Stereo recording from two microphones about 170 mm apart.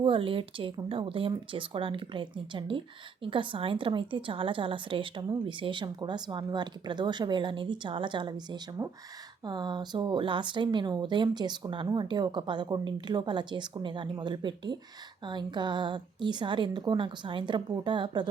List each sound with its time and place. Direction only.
0.0 s a woman's voice: 30° right (ahead or behind)
8.8 s a woman's voice: 15° right (ahead or behind)